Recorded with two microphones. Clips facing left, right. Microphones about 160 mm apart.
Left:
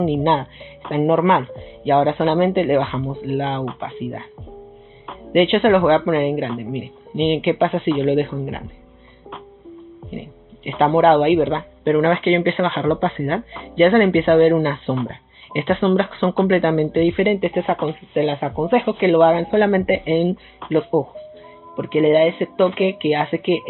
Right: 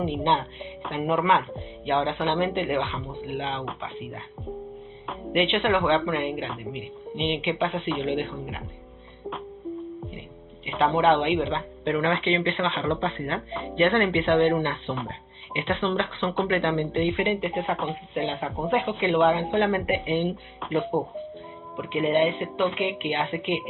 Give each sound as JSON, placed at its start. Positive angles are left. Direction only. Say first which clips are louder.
{"t": 0.0, "sound": "a woman's voice", "louder": "left 7 dB", "side_deg": 55}
{"t": 0.9, "sound": "a woman's voice", "louder": "left 7 dB", "side_deg": 45}
{"t": 5.3, "sound": "a woman's voice", "louder": "left 9 dB", "side_deg": 55}
{"t": 9.7, "sound": "music", "louder": "right 6 dB", "side_deg": -10}
{"t": 10.8, "sound": "speech", "louder": "left 7 dB", "side_deg": 55}
{"t": 18.1, "sound": "a woman's voice", "louder": "left 10 dB", "side_deg": 65}
{"t": 20.6, "sound": "music", "louder": "left 8 dB", "side_deg": 0}
{"t": 21.7, "sound": "a woman's voice", "louder": "left 9 dB", "side_deg": 55}